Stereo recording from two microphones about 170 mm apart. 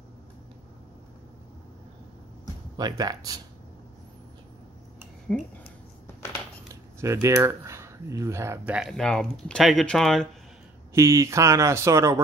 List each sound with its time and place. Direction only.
2.8 s speech: 25° right (ahead or behind)
5.3 s speech: 5° left (ahead or behind)
6.7 s speech: 20° right (ahead or behind); by 10.2 s 5° left (ahead or behind)
11.0 s speech: 15° right (ahead or behind)